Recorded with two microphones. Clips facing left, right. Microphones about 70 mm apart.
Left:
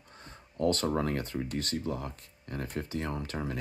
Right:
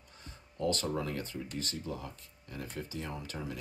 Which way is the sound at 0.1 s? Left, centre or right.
Left.